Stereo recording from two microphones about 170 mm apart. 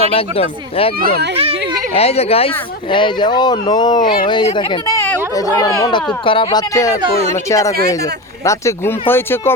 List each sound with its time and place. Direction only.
0.1 s speech: 35° left (ahead or behind)
0.9 s speech: 60° right (ahead or behind)
1.9 s speech: 35° left (ahead or behind)
4.9 s speech: 15° left (ahead or behind)
7.0 s speech: 40° right (ahead or behind)
7.5 s speech: 20° left (ahead or behind)